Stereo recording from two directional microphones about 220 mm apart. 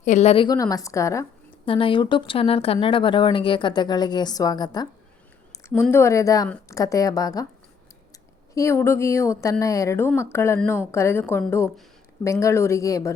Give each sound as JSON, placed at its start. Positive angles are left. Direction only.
{"t": 0.0, "sound": "a woman's voice", "side_deg": 30}
{"t": 8.5, "sound": "a woman's voice", "side_deg": 15}